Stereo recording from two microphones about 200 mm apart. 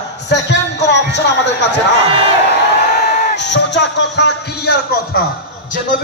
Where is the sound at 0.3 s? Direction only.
60° left (ahead or behind).